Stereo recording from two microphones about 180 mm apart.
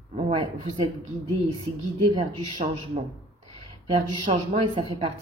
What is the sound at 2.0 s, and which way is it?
A woman's voice, 30° right (ahead or behind).